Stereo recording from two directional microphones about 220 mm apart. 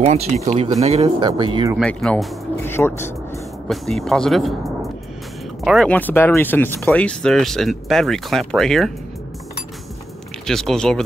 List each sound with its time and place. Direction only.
0.0 s speech: 30° right (ahead or behind)
1.8 s speech: 5° left (ahead or behind)
5.6 s speech: centre (ahead or behind)
10.4 s speech: centre (ahead or behind)